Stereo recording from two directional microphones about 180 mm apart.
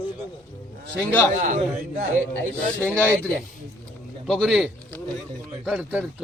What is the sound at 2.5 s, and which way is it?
Speech, 10° left (ahead or behind).